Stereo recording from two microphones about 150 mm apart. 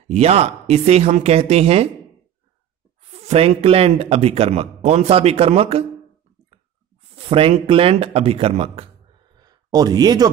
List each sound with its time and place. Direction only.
0.1 s speech: 45° right (ahead or behind)
3.0 s speech: 45° right (ahead or behind)
7.2 s speech: 40° right (ahead or behind)
9.4 s speech: 25° right (ahead or behind)